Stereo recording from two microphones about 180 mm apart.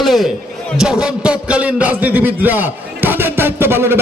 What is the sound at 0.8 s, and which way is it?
A man's voice, 5° right (ahead or behind).